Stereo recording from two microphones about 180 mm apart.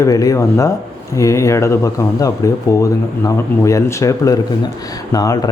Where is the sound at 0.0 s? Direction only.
20° left (ahead or behind).